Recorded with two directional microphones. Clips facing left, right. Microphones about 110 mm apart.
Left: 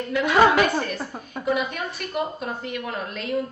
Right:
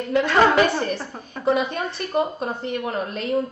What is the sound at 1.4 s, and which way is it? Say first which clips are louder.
A woman's voice: right 4 dB; 30° right (ahead or behind).